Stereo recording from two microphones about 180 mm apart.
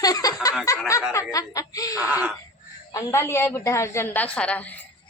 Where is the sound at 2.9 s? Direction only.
15° left (ahead or behind).